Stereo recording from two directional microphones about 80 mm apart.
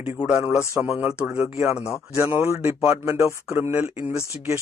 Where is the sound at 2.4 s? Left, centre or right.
Right.